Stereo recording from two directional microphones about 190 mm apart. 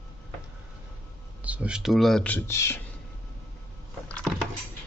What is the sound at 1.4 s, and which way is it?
Speech, 5° right (ahead or behind).